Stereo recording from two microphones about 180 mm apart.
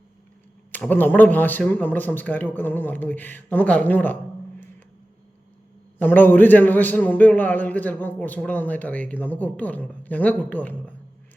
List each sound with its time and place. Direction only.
0.7 s a man's voice: 10° left (ahead or behind)
6.0 s a man's voice: 10° left (ahead or behind)